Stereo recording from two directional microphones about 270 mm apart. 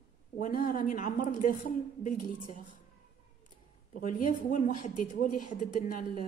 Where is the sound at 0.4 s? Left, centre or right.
Left.